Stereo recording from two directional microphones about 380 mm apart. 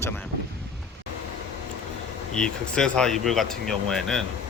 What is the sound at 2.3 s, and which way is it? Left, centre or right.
Speech, centre.